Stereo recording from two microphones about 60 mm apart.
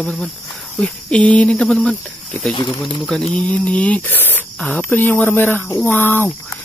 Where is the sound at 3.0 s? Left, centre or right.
Centre.